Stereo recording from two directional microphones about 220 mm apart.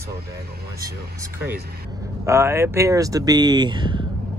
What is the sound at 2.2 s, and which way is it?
Speech, 10° right (ahead or behind).